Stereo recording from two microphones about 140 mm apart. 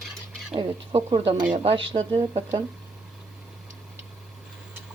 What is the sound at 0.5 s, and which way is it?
Speech, 40° right (ahead or behind).